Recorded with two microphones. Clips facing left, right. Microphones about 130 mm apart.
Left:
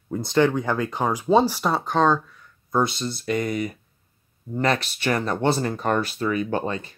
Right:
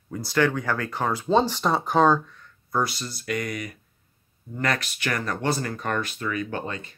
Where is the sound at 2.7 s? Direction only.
25° left (ahead or behind).